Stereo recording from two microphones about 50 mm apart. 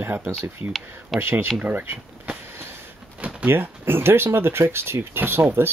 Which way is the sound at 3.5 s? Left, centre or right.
Right.